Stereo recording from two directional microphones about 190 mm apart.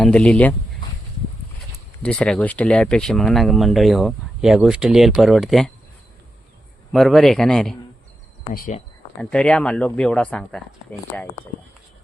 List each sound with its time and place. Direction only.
0.0 s speech: 5° left (ahead or behind)
2.0 s speech: 5° left (ahead or behind)
6.9 s speech: centre (ahead or behind)
8.5 s speech: 45° left (ahead or behind)
9.1 s speech: 5° left (ahead or behind)